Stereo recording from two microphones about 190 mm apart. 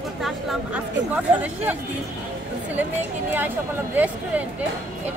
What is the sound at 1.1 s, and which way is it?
A woman's voice, 10° right (ahead or behind).